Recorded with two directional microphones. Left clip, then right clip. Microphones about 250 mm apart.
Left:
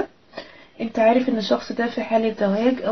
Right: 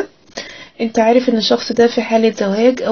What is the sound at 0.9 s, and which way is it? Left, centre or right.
Speech, right.